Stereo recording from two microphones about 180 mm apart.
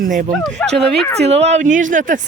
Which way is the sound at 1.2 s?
35° right (ahead or behind).